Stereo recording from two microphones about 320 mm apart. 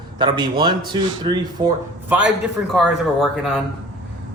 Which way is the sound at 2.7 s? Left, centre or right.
Centre.